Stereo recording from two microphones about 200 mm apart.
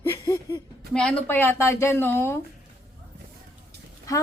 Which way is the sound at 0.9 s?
5° left (ahead or behind).